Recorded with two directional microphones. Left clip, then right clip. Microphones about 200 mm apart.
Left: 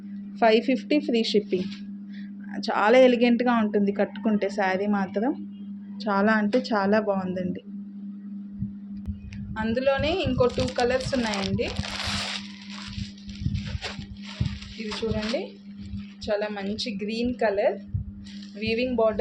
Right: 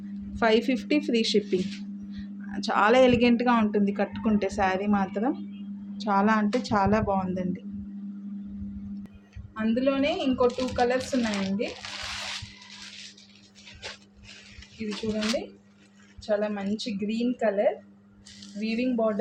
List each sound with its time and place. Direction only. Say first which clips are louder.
0.3 s a woman's voice: left 3 dB; 10° left (ahead or behind)
9.6 s a woman's voice: left 2 dB; 50° left (ahead or behind)
16.2 s a woman's voice: even; 50° left (ahead or behind)